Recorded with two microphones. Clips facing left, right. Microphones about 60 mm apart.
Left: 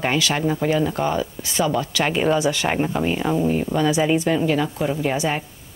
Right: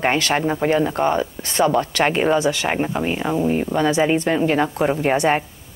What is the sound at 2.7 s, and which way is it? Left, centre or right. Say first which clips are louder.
Speech: even; centre.